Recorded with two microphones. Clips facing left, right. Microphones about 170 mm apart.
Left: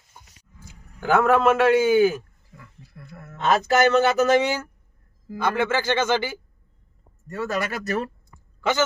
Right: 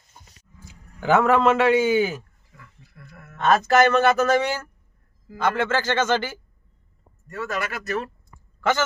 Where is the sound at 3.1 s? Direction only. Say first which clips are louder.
Left 5 dB; 35° left (ahead or behind).